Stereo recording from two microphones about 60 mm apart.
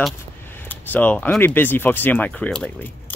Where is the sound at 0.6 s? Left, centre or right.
Left.